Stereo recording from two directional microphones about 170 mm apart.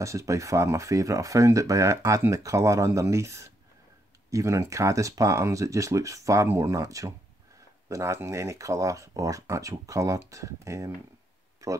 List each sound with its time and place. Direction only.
0.0 s speech: 20° right (ahead or behind)